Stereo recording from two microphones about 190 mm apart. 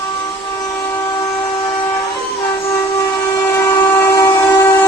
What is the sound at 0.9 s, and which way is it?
Train, 20° left (ahead or behind).